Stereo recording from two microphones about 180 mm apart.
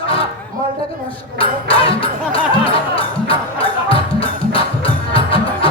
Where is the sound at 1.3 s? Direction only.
30° left (ahead or behind).